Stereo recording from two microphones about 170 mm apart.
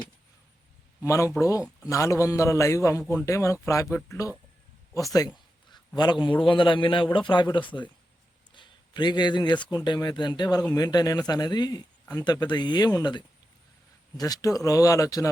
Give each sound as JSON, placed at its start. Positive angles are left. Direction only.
{"t": 1.0, "sound": "a man's voice", "side_deg": 15}
{"t": 3.0, "sound": "a man's voice", "side_deg": 5}
{"t": 3.2, "sound": "a man's voice", "side_deg": 20}
{"t": 8.5, "sound": "a sound", "side_deg": 25}
{"t": 9.6, "sound": "speech", "side_deg": 25}